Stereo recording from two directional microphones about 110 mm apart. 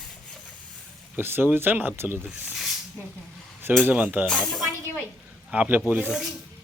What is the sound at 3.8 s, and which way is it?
Speech, 15° right (ahead or behind).